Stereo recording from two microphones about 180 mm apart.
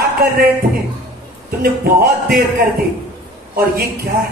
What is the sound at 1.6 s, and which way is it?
Speech, 55° right (ahead or behind).